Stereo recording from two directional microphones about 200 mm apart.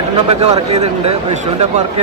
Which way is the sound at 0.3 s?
35° right (ahead or behind).